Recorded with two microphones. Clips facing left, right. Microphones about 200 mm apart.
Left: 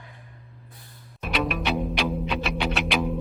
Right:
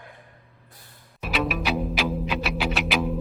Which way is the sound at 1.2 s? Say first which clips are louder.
Even; centre (ahead or behind).